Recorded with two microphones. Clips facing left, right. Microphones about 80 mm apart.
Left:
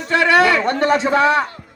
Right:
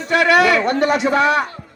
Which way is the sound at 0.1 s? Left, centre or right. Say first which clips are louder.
Even; left.